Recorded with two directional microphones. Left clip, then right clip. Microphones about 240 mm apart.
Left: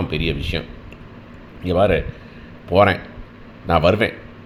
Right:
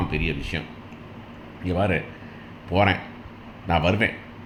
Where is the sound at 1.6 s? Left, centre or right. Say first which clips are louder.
Left 8 dB; left.